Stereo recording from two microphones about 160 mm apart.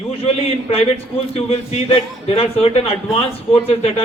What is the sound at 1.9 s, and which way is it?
A man's voice, 35° left (ahead or behind).